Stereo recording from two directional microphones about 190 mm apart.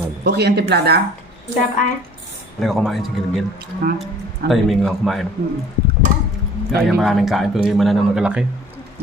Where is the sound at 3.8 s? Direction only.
50° right (ahead or behind).